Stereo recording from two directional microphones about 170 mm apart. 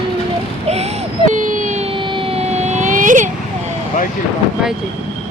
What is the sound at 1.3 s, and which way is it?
Emergency vehicle, 50° right (ahead or behind).